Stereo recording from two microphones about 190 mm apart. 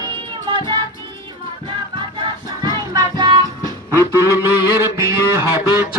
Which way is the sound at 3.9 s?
15° right (ahead or behind).